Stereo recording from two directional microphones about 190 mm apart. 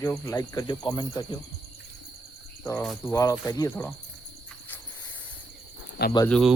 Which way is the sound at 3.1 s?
15° left (ahead or behind).